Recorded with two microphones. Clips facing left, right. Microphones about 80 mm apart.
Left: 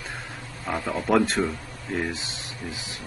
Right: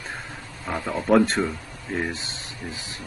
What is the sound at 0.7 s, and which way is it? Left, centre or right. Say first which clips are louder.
Mantra: right 2 dB; centre.